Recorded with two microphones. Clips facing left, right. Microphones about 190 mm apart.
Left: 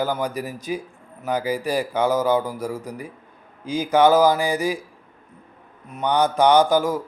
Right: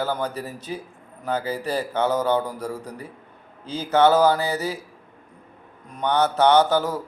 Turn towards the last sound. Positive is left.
turn(degrees=10)  # may be behind; listen again after turning